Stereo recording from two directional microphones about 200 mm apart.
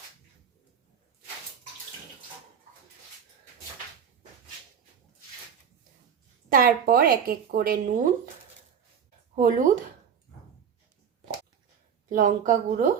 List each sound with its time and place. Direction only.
6.5 s a woman's voice: 45° right (ahead or behind)
9.3 s speech: 40° right (ahead or behind)
12.0 s a woman's voice: 40° right (ahead or behind)